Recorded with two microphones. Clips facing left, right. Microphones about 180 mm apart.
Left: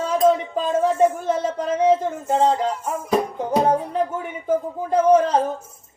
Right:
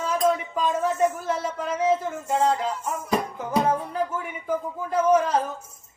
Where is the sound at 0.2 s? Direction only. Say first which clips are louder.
Left 6 dB; 35° left (ahead or behind).